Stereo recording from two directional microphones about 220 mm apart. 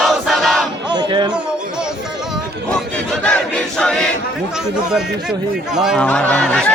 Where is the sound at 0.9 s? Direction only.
20° right (ahead or behind).